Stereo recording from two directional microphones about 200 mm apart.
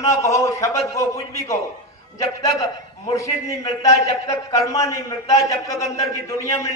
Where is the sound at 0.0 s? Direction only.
15° left (ahead or behind).